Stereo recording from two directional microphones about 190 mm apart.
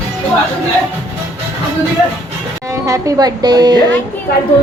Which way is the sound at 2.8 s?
15° right (ahead or behind).